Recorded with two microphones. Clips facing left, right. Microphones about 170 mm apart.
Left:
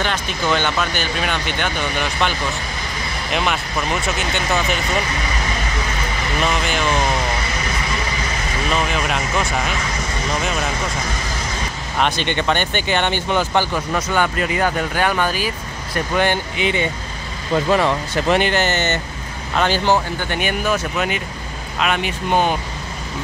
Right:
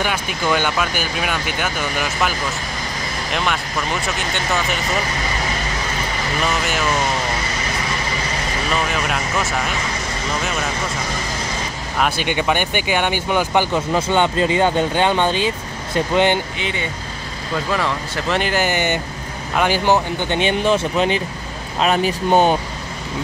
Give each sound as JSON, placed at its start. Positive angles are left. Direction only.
{"t": 0.0, "sound": "speech", "side_deg": -10}
{"t": 3.3, "sound": "speech", "side_deg": 0}
{"t": 6.4, "sound": "speech", "side_deg": 0}
{"t": 8.6, "sound": "speech", "side_deg": 0}
{"t": 12.0, "sound": "speech", "side_deg": -10}
{"t": 13.7, "sound": "speech", "side_deg": -25}
{"t": 17.7, "sound": "speech", "side_deg": 20}
{"t": 18.4, "sound": "speech", "side_deg": -10}